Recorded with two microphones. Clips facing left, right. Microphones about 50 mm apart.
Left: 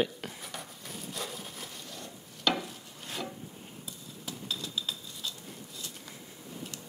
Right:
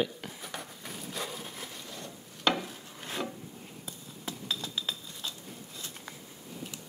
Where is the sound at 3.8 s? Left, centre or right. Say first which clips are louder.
Right 3 dB; right.